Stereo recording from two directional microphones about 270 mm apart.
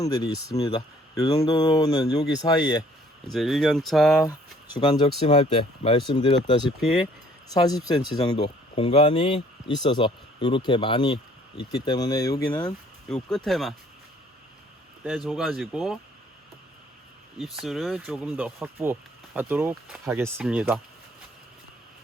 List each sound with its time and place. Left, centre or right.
0.0 s speech: centre
3.2 s speech: centre
4.2 s speech: centre
13.3 s speech: centre
15.3 s speech: centre
17.4 s speech: centre